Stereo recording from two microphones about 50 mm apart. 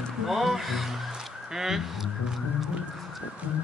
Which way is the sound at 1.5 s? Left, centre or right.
Centre.